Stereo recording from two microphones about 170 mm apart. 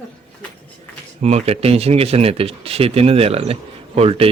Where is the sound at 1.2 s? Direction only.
40° right (ahead or behind).